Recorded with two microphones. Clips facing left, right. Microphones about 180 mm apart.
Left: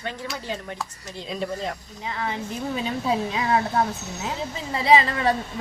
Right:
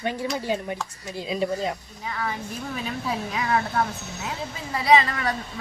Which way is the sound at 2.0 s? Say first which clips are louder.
Left 1 dB; 25° left (ahead or behind).